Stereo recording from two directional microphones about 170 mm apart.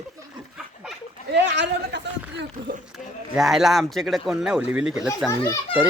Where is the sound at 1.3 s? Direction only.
90° right.